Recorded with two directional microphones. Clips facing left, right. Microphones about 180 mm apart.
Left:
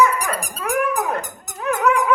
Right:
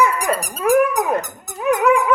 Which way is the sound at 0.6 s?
25° right (ahead or behind).